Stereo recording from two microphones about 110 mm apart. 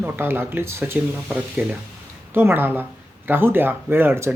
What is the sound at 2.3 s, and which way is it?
Speech, 20° right (ahead or behind).